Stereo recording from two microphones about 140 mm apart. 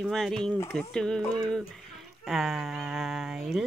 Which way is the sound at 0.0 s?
5° left (ahead or behind).